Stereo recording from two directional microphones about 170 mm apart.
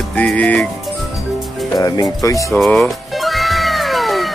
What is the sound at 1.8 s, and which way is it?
Speech, 20° left (ahead or behind).